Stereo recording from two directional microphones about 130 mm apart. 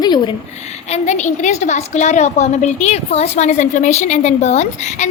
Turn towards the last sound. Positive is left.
turn(degrees=60)  # may be behind; listen again after turning